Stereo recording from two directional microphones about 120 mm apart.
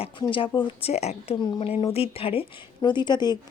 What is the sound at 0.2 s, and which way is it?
A woman's voice, 45° left (ahead or behind).